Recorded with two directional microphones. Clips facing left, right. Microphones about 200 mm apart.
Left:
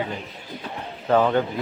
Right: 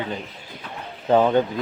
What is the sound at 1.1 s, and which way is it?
Speech, 15° right (ahead or behind).